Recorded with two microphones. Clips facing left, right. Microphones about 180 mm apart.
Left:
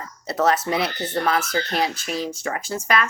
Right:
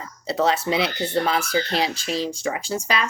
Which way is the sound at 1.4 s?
10° right (ahead or behind).